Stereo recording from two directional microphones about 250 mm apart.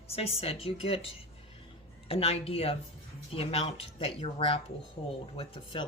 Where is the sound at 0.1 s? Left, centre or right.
Left.